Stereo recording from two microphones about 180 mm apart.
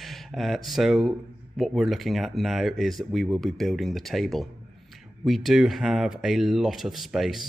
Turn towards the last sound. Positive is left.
turn(degrees=0)  # may be behind; listen again after turning